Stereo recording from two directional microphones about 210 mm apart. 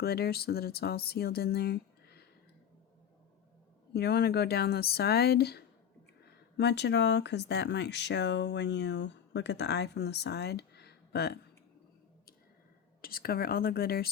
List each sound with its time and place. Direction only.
0.0 s speech: 50° left (ahead or behind)
3.9 s speech: 50° left (ahead or behind)
13.0 s speech: 45° left (ahead or behind)